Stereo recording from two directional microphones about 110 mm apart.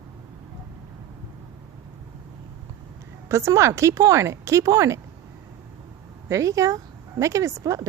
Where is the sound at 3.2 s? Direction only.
25° right (ahead or behind).